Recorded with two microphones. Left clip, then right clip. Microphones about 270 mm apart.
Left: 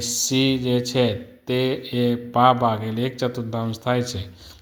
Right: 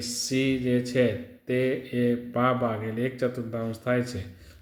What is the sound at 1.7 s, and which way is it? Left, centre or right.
Speech, centre.